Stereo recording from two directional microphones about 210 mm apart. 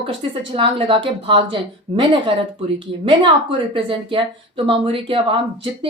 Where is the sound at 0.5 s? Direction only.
25° right (ahead or behind).